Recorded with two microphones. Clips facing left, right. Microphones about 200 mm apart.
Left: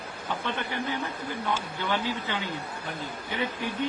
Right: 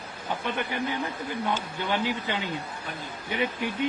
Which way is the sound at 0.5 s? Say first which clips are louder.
Right 2 dB; 15° right (ahead or behind).